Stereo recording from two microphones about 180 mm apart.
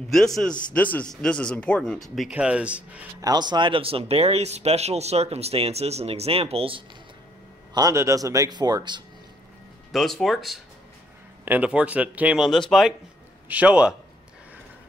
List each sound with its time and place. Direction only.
0.7 s a man's voice: 10° left (ahead or behind); by 3.1 s 5° right (ahead or behind)
3.2 s speech: 20° right (ahead or behind)
7.7 s a man's voice: 20° right (ahead or behind)
9.9 s a man's voice: centre (ahead or behind)